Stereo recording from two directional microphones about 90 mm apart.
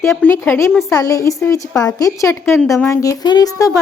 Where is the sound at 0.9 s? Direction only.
40° left (ahead or behind).